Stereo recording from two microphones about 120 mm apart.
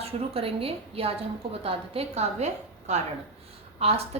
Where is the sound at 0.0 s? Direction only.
55° right (ahead or behind); by 3.0 s 70° right (ahead or behind).